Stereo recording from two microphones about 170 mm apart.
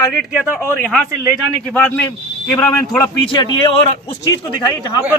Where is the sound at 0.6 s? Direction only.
5° left (ahead or behind).